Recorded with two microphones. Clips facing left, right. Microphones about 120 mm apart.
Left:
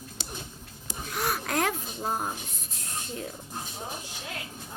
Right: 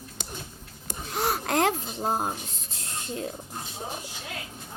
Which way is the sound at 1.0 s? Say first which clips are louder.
Right 3 dB; 30° right (ahead or behind).